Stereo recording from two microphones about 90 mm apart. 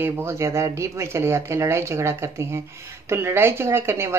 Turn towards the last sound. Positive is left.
turn(degrees=-30)  # may be behind; listen again after turning